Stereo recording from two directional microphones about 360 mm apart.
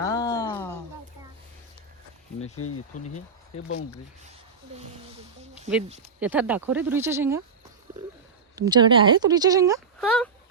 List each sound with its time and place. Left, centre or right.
0.0 s a sound: centre
2.4 s speech: left
3.5 s speech: centre
6.1 s speech: centre
8.5 s speech: centre